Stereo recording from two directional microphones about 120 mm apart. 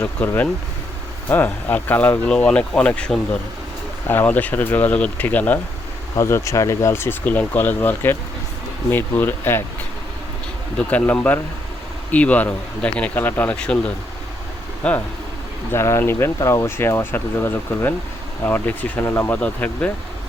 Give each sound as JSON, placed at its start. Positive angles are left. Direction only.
{"t": 1.3, "sound": "speech", "side_deg": 15}
{"t": 10.8, "sound": "speech", "side_deg": 10}
{"t": 15.7, "sound": "speech", "side_deg": 20}